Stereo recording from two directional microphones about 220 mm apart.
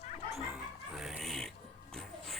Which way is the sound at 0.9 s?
Centre (ahead or behind).